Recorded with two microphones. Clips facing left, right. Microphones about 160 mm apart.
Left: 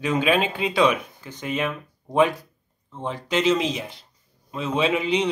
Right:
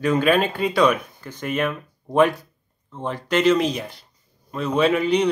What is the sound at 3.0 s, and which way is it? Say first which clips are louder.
Speech: right 3 dB; 60° right (ahead or behind).